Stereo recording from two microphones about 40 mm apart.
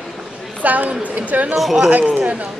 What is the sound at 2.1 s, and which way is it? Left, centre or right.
Speech, right.